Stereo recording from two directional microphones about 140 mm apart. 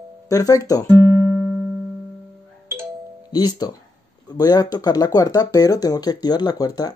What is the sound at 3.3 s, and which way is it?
Speech, 30° left (ahead or behind).